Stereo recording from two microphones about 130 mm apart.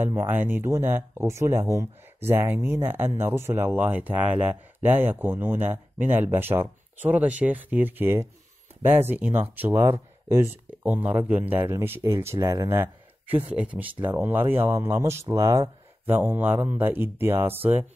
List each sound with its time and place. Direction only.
0.0 s speech: 15° right (ahead or behind)